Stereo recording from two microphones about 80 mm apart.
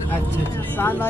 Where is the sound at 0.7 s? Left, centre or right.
Left.